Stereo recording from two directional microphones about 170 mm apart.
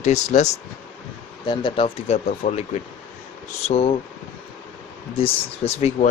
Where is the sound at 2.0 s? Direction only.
40° left (ahead or behind).